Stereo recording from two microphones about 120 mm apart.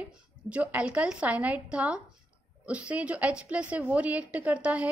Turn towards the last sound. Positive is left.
turn(degrees=-10)  # may be behind; listen again after turning